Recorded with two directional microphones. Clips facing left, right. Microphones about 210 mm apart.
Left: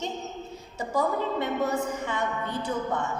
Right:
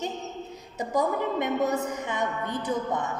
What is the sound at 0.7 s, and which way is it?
A woman's voice, 20° right (ahead or behind).